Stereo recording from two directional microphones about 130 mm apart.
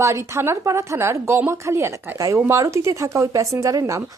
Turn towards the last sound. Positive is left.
turn(degrees=-25)  # may be behind; listen again after turning